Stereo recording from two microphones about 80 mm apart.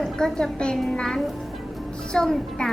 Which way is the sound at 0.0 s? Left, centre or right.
Centre.